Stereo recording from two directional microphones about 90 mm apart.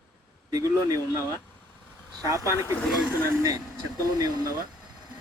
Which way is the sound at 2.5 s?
35° left (ahead or behind).